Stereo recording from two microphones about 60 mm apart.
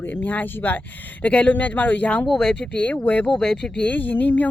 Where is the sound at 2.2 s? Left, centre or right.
Centre.